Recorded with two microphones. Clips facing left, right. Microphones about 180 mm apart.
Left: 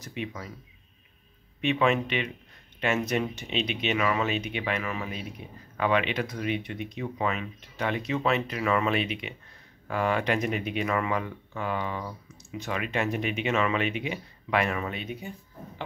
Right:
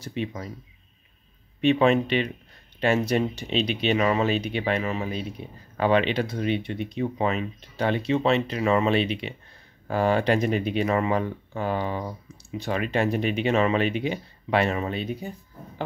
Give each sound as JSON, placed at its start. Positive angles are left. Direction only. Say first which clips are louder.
{"t": 0.0, "sound": "speech", "louder": "right 5 dB", "side_deg": -30}
{"t": 1.6, "sound": "speech", "louder": "right 5 dB", "side_deg": -35}